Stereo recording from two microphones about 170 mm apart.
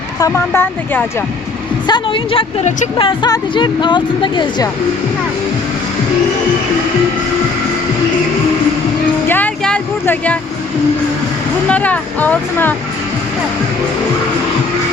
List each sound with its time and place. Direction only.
0.2 s speech: 15° left (ahead or behind)
1.9 s speech: 30° left (ahead or behind)
9.3 s a sound: 10° left (ahead or behind)
11.7 s speech: 10° left (ahead or behind)